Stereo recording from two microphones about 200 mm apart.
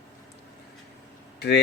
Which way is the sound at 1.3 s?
55° left (ahead or behind).